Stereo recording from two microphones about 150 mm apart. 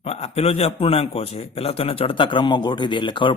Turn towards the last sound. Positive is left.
turn(degrees=30)  # may be behind; listen again after turning